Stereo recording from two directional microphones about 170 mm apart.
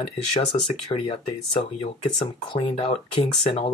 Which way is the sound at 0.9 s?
30° left (ahead or behind).